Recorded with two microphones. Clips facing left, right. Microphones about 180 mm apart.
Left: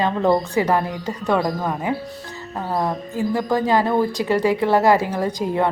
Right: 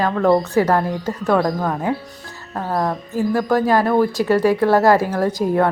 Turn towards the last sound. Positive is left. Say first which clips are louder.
# right 3 dB
turn(degrees=15)  # may be behind; listen again after turning